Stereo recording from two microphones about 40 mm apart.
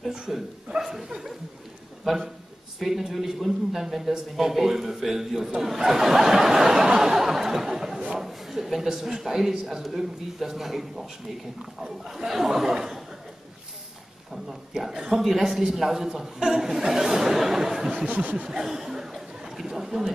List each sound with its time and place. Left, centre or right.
0.3 s a man's voice: centre
0.7 s chuckle: centre
2.0 s a man's voice: centre
7.0 s a sound: centre
8.1 s a man's voice: centre
14.7 s a man's voice: centre
17.9 s snicker: right
18.5 s chatter: centre